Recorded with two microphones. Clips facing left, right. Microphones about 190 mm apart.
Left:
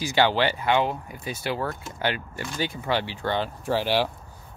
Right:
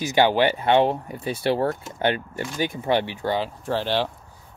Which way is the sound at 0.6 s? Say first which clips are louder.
Right 5 dB; 30° right (ahead or behind).